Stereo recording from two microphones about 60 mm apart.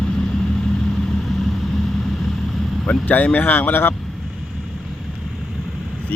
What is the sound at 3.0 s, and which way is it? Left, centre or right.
Speech, left.